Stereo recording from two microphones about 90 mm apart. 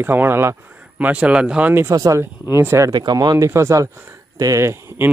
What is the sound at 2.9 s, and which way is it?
Speech, 50° right (ahead or behind).